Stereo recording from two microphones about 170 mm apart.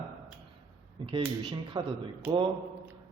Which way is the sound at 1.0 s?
30° right (ahead or behind).